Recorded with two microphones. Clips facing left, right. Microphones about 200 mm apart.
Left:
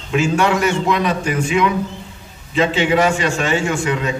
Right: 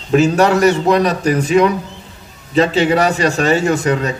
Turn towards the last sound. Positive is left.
turn(degrees=-40)  # may be behind; listen again after turning